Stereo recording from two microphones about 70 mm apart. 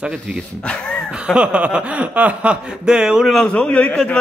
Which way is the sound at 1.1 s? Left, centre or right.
Centre.